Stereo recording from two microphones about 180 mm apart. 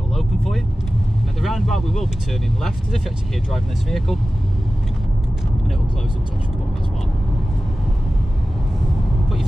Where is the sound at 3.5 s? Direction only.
Centre (ahead or behind).